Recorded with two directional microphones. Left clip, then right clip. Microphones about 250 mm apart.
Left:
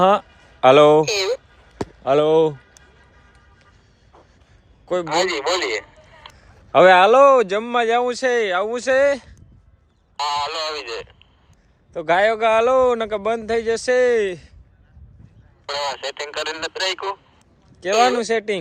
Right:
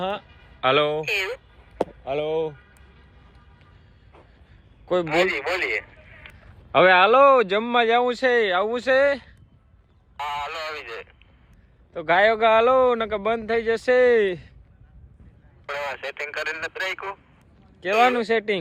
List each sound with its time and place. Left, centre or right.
0.0 s a man's voice: left
0.6 s speech: centre
2.0 s speech: left
5.0 s a man's voice: left
5.8 s a sound: centre
6.7 s speech: centre
10.2 s radio: left
11.9 s speech: centre
15.6 s speech: left
17.7 s speech: centre